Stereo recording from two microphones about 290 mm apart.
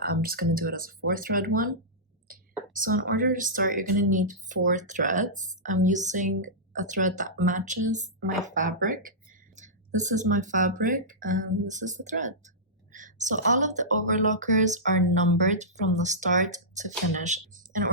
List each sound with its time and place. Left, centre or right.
0.0 s speech: right
2.7 s speech: right
12.9 s a sound: right
14.3 s a woman's voice: right